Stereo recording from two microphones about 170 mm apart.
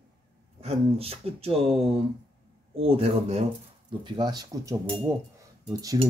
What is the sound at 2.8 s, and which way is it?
Speech, 35° right (ahead or behind).